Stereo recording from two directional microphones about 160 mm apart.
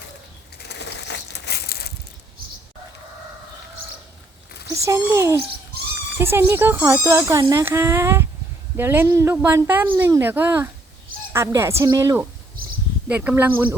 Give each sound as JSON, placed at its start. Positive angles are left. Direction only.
{"t": 0.7, "sound": "crushing", "side_deg": 90}
{"t": 4.7, "sound": "speech", "side_deg": -20}